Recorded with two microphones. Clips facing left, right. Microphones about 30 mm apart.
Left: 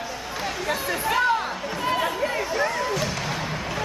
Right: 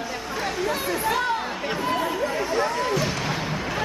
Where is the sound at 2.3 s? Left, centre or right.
Centre.